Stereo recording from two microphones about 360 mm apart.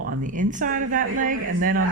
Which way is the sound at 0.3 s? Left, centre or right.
Right.